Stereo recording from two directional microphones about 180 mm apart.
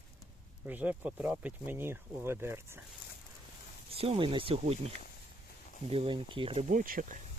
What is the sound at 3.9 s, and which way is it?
Speech, 30° right (ahead or behind).